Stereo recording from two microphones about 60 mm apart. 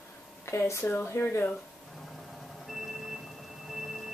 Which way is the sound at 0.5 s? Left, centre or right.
Left.